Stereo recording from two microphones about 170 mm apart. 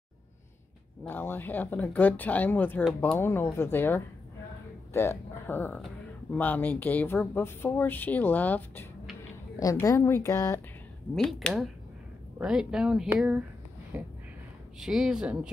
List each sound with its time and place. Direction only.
1.0 s speech: 10° left (ahead or behind)
11.1 s speech: 5° left (ahead or behind)
13.9 s a sound: 10° right (ahead or behind)
14.8 s speech: centre (ahead or behind)